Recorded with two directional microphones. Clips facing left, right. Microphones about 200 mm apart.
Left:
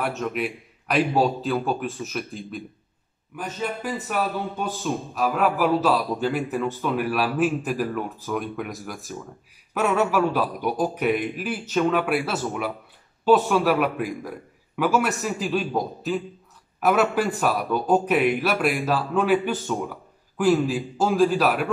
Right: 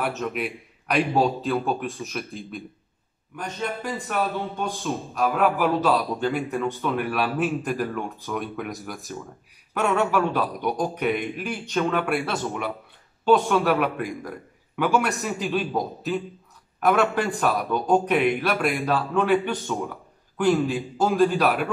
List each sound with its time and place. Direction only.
0.0 s a man's voice: centre (ahead or behind)